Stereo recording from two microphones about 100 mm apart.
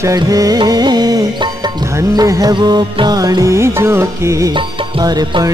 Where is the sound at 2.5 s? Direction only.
50° right (ahead or behind); by 4.4 s 30° right (ahead or behind).